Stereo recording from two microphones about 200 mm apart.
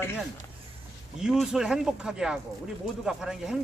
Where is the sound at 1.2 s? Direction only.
Centre (ahead or behind).